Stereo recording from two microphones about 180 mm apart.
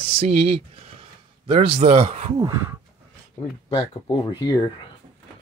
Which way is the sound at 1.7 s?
35° right (ahead or behind).